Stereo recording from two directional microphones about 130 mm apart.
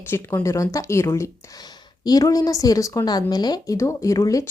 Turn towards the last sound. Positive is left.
turn(degrees=25)  # may be behind; listen again after turning